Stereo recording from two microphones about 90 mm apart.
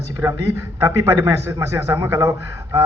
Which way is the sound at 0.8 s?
40° right (ahead or behind).